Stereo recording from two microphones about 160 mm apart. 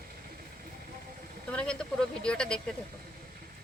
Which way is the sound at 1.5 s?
5° left (ahead or behind).